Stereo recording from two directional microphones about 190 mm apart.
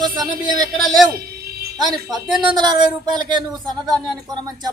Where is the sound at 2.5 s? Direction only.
20° right (ahead or behind).